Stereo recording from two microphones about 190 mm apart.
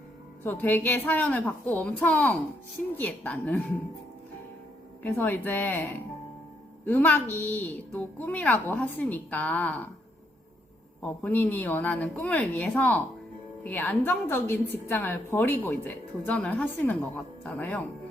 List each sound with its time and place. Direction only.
0.4 s a woman's voice: 10° left (ahead or behind)
5.0 s a woman's voice: 10° left (ahead or behind)
6.8 s a woman's voice: 10° left (ahead or behind)
11.0 s a woman's voice: 10° left (ahead or behind)